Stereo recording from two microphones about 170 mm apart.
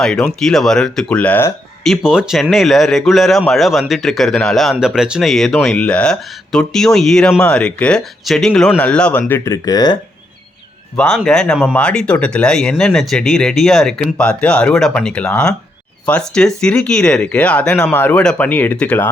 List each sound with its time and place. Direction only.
0.0 s speech: 5° left (ahead or behind)
1.8 s speech: centre (ahead or behind); by 10.0 s 25° left (ahead or behind)
10.9 s speech: 5° left (ahead or behind)